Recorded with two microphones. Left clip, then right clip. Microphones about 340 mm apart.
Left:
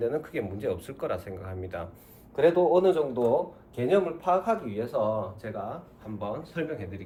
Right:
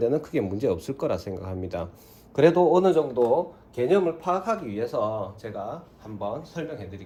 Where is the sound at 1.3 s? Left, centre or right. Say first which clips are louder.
Right 6 dB; right.